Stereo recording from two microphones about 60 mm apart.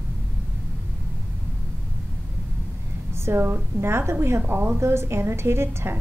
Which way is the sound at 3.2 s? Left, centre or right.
Right.